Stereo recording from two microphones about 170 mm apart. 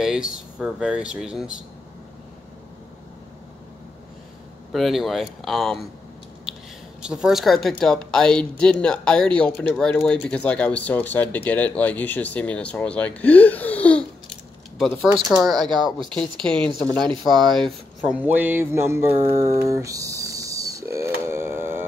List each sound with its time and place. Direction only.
0.0 s speech: 5° right (ahead or behind)
4.7 s speech: centre (ahead or behind)
7.0 s speech: 5° right (ahead or behind)
17.1 s speech: 25° right (ahead or behind)
17.6 s mantra: 10° right (ahead or behind)